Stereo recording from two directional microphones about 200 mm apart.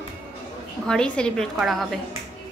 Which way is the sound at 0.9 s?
5° left (ahead or behind).